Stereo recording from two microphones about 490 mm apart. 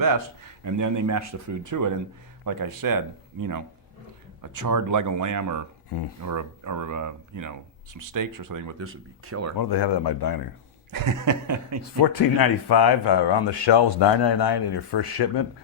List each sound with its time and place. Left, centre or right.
0.6 s speech: right
8.8 s speech: right
9.6 s speech: left
10.9 s speech: right
12.4 s speech: left